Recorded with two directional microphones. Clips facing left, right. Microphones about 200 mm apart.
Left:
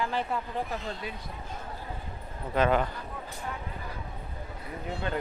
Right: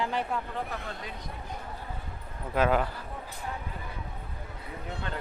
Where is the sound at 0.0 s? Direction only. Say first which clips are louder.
Even; 15° right (ahead or behind).